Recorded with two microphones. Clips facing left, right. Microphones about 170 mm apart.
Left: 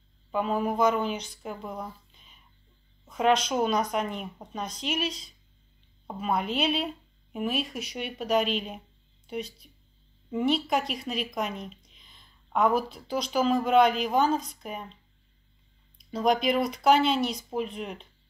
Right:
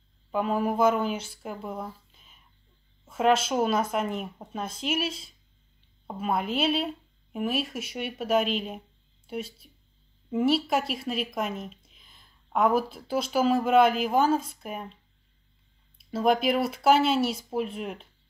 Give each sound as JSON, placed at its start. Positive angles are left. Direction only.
{"t": 0.3, "sound": "speech", "side_deg": -5}
{"t": 16.0, "sound": "speech", "side_deg": -5}